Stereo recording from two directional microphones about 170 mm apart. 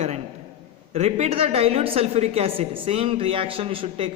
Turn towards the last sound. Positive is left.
turn(degrees=-35)  # may be behind; listen again after turning